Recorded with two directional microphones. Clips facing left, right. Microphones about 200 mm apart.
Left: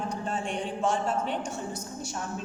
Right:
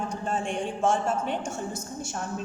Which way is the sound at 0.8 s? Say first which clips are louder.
Right 3 dB; 50° right (ahead or behind).